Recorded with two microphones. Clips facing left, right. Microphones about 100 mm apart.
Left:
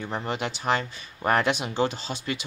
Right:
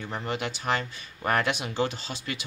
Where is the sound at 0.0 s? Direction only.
25° left (ahead or behind).